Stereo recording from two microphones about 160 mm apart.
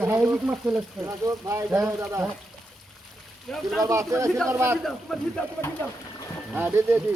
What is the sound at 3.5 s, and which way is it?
Speech, 5° left (ahead or behind).